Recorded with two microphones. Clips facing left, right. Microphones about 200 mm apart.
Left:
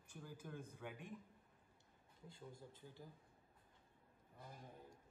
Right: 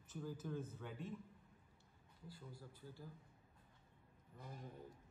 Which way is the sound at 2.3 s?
25° left (ahead or behind).